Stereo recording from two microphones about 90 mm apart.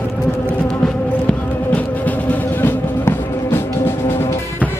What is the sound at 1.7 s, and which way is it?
Music, 15° left (ahead or behind).